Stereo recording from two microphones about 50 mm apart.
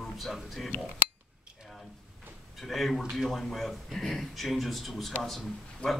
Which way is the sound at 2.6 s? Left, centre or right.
Centre.